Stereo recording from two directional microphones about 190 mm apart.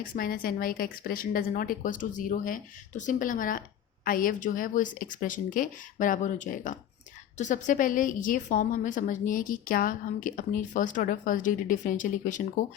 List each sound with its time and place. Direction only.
0.2 s a woman's voice: 50° left (ahead or behind)